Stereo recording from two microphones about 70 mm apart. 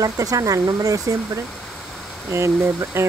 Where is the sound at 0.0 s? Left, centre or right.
Right.